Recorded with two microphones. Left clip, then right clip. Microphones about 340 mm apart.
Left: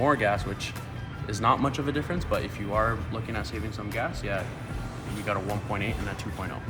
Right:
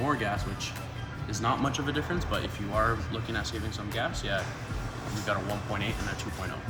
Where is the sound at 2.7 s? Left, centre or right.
Centre.